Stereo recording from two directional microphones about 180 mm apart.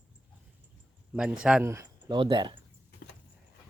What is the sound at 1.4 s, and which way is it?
Speech, 10° right (ahead or behind).